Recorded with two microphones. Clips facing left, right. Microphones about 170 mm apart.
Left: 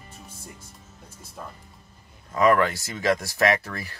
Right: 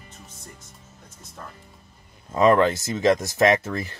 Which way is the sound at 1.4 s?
10° left (ahead or behind).